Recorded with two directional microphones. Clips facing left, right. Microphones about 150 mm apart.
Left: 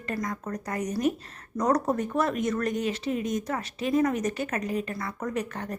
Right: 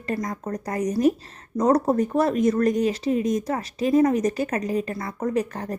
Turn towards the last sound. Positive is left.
turn(degrees=-35)  # may be behind; listen again after turning